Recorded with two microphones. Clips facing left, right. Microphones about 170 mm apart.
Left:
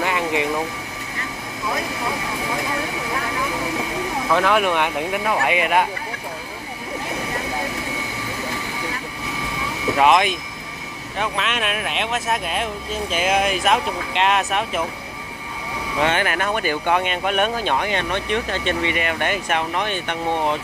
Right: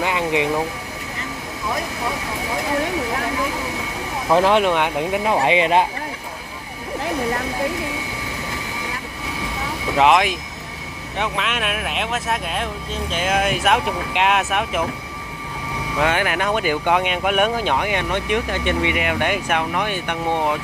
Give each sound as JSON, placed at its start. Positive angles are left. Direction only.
{"t": 0.0, "sound": "vehicle", "side_deg": -15}
{"t": 4.3, "sound": "speech", "side_deg": -30}
{"t": 4.6, "sound": "speech", "side_deg": -15}
{"t": 10.0, "sound": "speech", "side_deg": -10}
{"t": 11.3, "sound": "speech", "side_deg": -5}
{"t": 16.0, "sound": "speech", "side_deg": -10}